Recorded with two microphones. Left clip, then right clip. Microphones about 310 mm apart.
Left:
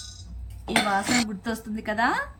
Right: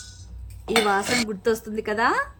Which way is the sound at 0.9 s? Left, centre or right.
Centre.